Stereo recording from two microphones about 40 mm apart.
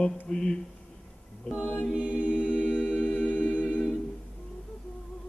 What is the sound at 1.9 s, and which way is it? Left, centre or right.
Chant, right.